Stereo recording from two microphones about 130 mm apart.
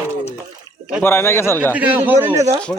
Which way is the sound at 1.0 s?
20° left (ahead or behind).